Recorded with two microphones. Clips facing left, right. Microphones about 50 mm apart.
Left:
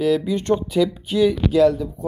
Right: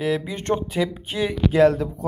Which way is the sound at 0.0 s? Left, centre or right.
Right.